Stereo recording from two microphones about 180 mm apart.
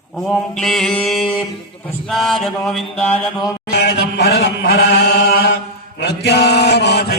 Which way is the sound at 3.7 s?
65° left (ahead or behind).